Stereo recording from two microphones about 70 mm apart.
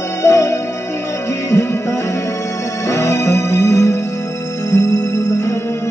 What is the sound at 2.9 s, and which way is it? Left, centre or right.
Music, left.